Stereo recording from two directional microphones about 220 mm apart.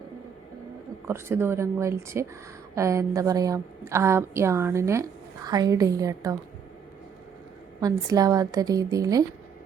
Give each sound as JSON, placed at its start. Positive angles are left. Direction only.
{"t": 1.0, "sound": "a woman's voice", "side_deg": -10}
{"t": 7.8, "sound": "a woman's voice", "side_deg": -15}